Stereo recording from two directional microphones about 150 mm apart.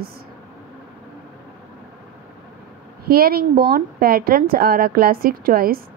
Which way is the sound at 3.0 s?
80° right.